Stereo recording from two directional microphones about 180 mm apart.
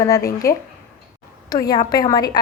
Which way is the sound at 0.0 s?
15° left (ahead or behind).